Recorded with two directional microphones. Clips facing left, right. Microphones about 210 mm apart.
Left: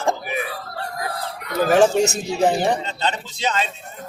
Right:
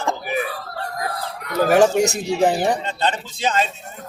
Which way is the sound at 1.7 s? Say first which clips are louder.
Even; 10° right (ahead or behind).